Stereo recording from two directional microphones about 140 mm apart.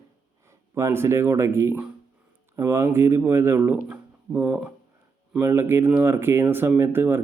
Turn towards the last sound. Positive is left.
turn(degrees=-15)  # may be behind; listen again after turning